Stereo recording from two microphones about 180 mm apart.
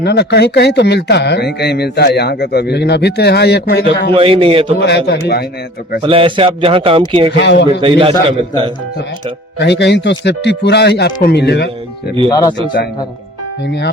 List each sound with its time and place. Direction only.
0.0 s speech: 65° left (ahead or behind)
4.1 s a man's voice: 30° right (ahead or behind)
4.8 s speech: 70° left (ahead or behind)
6.0 s speech: 30° right (ahead or behind)
7.3 s speech: 75° left (ahead or behind)
7.8 s speech: 30° right (ahead or behind)
9.6 s speech: 75° left (ahead or behind)
12.3 s speech: 20° left (ahead or behind)